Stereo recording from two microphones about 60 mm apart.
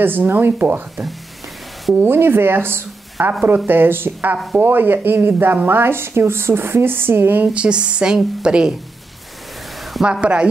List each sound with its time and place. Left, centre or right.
0.0 s speech: right
7.5 s speech: centre
9.9 s speech: centre